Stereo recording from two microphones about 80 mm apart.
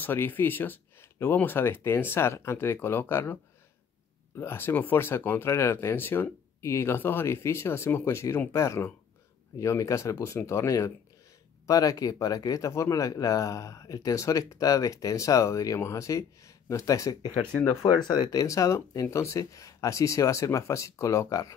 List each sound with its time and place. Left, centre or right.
0.0 s speech: left
4.4 s speech: left
17.9 s speech: left
18.3 s speech: left